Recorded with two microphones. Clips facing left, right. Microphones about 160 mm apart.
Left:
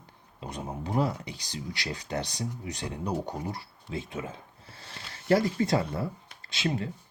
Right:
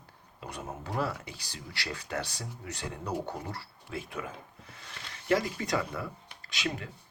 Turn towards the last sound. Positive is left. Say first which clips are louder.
# left 5 dB
turn(degrees=30)  # may be behind; listen again after turning